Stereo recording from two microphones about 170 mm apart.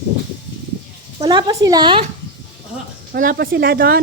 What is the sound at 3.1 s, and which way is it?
Speech, 60° right (ahead or behind).